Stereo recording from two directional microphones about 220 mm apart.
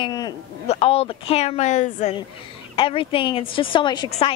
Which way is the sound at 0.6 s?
25° left (ahead or behind).